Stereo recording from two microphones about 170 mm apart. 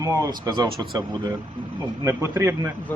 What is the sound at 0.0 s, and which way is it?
Speech, 20° right (ahead or behind).